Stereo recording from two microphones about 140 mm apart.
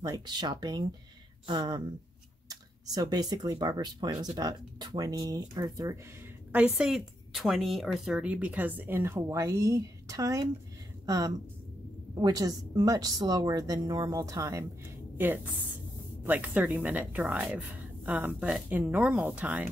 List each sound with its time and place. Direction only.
0.0 s speech: 30° right (ahead or behind)
6.5 s a woman's voice: 5° right (ahead or behind)